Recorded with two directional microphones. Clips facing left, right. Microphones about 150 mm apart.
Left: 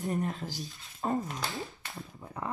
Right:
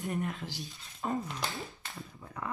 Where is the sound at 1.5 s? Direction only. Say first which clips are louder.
Left 3 dB; 20° left (ahead or behind).